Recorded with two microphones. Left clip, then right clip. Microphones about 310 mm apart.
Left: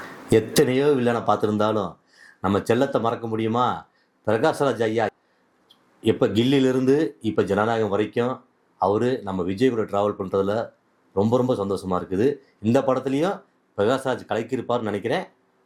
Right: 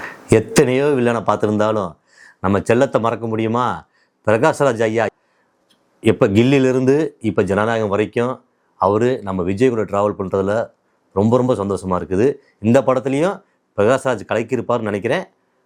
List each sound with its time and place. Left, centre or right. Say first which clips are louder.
0.3 s speech: right 5 dB; right